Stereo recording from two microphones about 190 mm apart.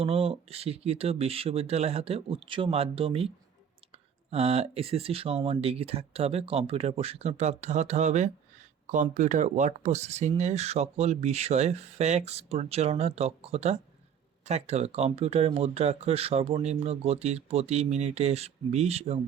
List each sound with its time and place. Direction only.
0.0 s speech: 30° right (ahead or behind)